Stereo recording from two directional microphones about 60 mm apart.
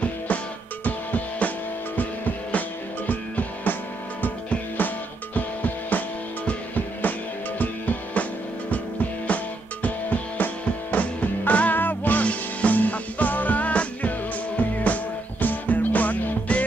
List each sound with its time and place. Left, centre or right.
0.8 s music: left
9.8 s music: left